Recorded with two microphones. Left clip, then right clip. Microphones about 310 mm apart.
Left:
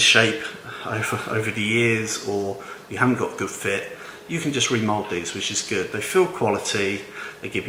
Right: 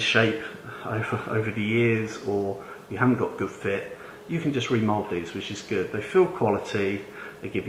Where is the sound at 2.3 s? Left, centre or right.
Right.